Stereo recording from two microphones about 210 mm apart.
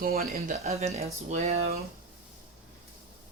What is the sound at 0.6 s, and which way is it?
Speech, 30° right (ahead or behind).